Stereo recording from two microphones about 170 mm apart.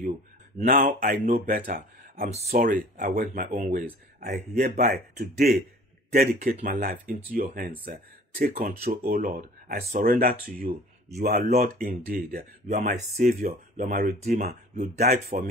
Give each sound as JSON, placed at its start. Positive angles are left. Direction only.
{"t": 0.6, "sound": "speech", "side_deg": -55}
{"t": 11.1, "sound": "speech", "side_deg": -40}
{"t": 11.4, "sound": "speech", "side_deg": -55}
{"t": 12.6, "sound": "speech", "side_deg": -45}
{"t": 13.2, "sound": "speech", "side_deg": -55}